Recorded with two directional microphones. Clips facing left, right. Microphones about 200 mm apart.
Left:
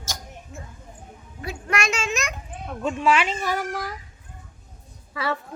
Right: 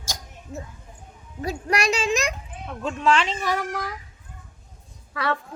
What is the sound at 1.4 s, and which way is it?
Speech, 35° right (ahead or behind).